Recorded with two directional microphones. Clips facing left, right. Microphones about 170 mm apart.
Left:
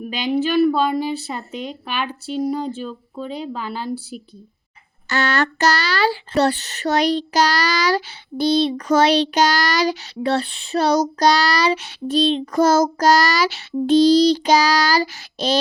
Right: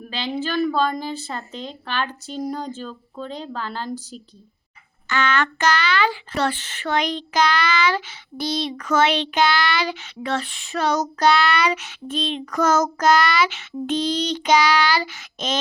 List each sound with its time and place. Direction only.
0.0 s a woman's voice: 15° left (ahead or behind)
5.0 s speech: 40° left (ahead or behind)